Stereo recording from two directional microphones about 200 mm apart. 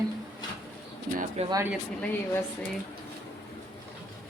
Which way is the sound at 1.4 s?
35° right (ahead or behind).